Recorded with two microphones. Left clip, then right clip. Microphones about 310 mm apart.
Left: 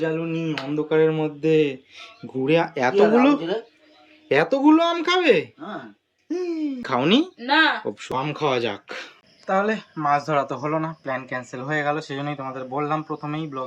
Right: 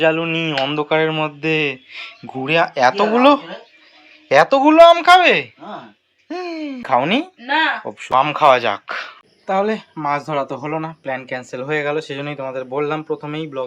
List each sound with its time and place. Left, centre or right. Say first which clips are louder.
0.3 s speech: right 8 dB; centre
0.9 s speech: right 2 dB; centre